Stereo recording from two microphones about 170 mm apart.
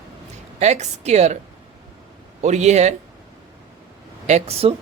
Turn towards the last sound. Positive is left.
turn(degrees=-35)  # may be behind; listen again after turning